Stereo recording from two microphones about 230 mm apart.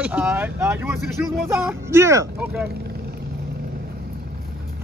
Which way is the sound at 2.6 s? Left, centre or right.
Right.